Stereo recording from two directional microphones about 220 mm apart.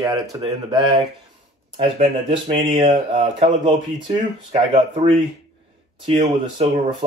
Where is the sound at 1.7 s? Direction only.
25° right (ahead or behind).